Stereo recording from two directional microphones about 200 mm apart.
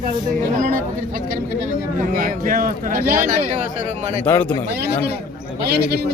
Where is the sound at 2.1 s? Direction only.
45° right (ahead or behind).